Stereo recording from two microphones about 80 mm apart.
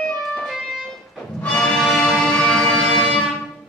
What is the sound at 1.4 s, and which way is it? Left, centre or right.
Music, centre.